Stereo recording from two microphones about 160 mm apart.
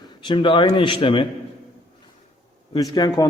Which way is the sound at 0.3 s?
30° left (ahead or behind).